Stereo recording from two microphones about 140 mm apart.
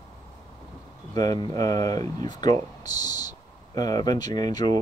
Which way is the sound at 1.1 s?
30° left (ahead or behind).